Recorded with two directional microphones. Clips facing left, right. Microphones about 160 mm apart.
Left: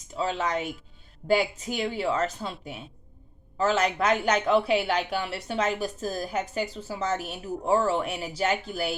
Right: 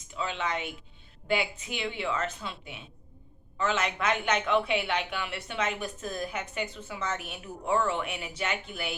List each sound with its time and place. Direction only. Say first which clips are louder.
0.1 s speech: left 5 dB; 35° left (ahead or behind)